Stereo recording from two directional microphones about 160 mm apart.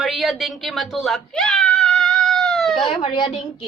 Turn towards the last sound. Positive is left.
turn(degrees=30)  # may be behind; listen again after turning